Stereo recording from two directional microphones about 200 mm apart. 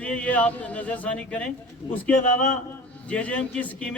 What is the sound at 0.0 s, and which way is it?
A man's voice, 5° left (ahead or behind).